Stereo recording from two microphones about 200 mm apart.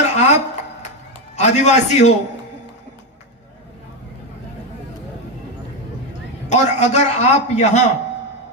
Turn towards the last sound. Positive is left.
turn(degrees=35)  # may be behind; listen again after turning